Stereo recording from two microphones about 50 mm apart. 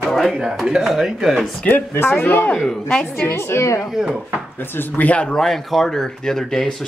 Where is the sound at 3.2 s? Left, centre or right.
Left.